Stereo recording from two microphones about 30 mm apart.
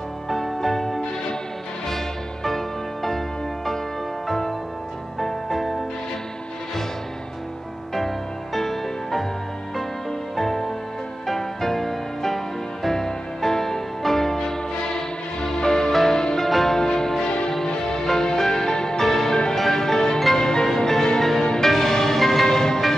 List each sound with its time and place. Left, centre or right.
0.3 s music: centre
8.5 s music: centre
10.3 s music: centre
16.4 s music: centre
16.7 s music: centre
18.8 s music: left
19.0 s music: centre
20.3 s marimba: left
20.6 s music: centre